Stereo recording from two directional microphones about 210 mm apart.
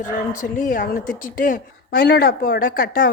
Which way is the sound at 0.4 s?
40° left (ahead or behind).